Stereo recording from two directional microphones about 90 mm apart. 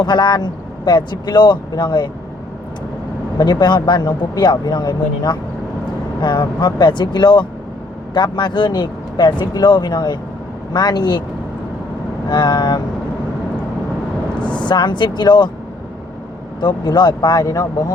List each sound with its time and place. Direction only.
0.0 s speech: 55° left (ahead or behind)
3.3 s speech: 50° left (ahead or behind)
12.3 s speech: 55° left (ahead or behind)
14.4 s speech: 55° left (ahead or behind)
16.6 s speech: 55° left (ahead or behind)